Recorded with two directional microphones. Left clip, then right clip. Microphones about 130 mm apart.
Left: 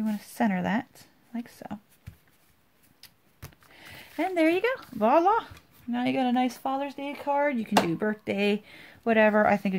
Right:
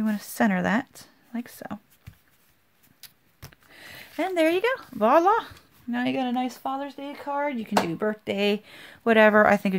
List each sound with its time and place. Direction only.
0.0 s speech: 35° right (ahead or behind)
3.4 s sniff: 5° right (ahead or behind)
3.7 s speech: 25° right (ahead or behind)
6.1 s speech: 5° right (ahead or behind)
7.8 s speech: 10° right (ahead or behind); by 9.8 s 30° right (ahead or behind)